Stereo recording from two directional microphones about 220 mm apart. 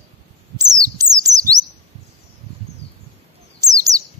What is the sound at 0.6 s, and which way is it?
Bird, 15° right (ahead or behind).